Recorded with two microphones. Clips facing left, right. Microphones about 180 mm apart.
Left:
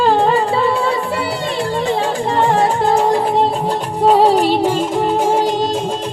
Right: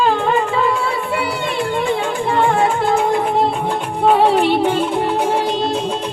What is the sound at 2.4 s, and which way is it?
Music, 40° left (ahead or behind).